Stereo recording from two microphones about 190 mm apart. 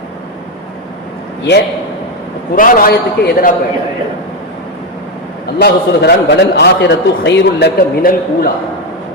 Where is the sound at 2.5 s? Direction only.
45° left (ahead or behind).